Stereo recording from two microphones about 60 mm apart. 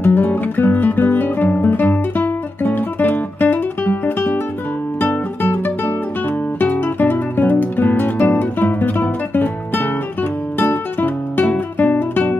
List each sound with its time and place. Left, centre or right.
0.0 s guitar: left
5.4 s music: left
6.6 s guitar: left
10.6 s music: left